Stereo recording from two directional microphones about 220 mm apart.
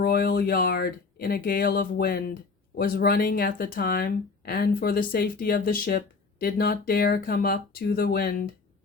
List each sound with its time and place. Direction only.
0.0 s speech: 45° left (ahead or behind)